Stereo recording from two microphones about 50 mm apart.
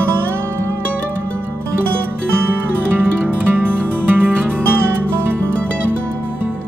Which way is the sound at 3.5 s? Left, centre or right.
Right.